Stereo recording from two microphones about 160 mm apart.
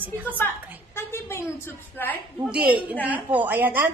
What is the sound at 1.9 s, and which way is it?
Speech, 10° left (ahead or behind).